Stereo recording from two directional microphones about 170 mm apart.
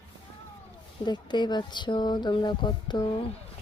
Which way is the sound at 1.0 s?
25° left (ahead or behind).